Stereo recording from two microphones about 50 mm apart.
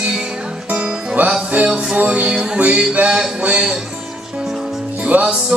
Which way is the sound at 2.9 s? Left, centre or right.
Right.